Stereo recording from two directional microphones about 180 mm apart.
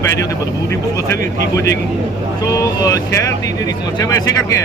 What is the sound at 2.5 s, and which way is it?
Speech, 20° left (ahead or behind).